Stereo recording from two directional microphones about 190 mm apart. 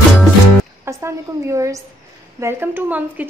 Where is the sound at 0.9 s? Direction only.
15° right (ahead or behind).